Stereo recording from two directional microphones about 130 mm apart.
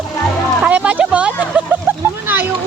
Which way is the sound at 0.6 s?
10° right (ahead or behind).